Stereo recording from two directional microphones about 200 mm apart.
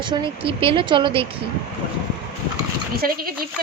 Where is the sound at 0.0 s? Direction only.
25° right (ahead or behind).